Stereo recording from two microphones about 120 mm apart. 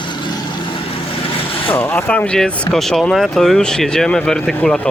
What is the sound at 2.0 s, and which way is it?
Speech, 10° left (ahead or behind).